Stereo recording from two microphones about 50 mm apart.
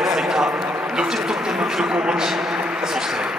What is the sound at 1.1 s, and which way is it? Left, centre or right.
Speech, centre.